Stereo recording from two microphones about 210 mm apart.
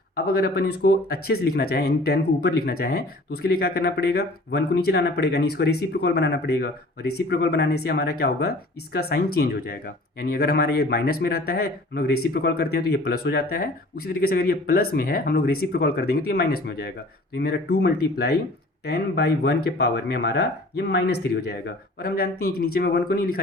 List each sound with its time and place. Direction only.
0.2 s speech: 50° left (ahead or behind)
22.0 s speech: 45° left (ahead or behind)